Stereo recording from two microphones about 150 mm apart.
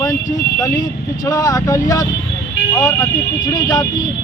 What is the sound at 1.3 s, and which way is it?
Speech, 25° left (ahead or behind).